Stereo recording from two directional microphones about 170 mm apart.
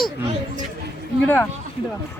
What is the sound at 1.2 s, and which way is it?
Speech, 10° left (ahead or behind).